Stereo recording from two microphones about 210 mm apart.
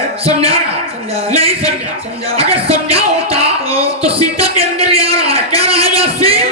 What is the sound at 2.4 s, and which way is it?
Music, 30° right (ahead or behind).